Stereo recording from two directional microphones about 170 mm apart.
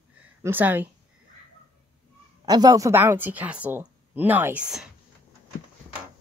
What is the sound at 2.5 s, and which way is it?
A woman's voice, 20° right (ahead or behind).